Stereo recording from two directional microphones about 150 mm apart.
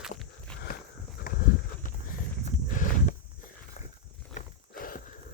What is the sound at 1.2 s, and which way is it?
Horse, 70° left (ahead or behind).